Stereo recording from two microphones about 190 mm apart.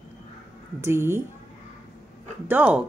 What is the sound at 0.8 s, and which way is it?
Speech, 15° right (ahead or behind).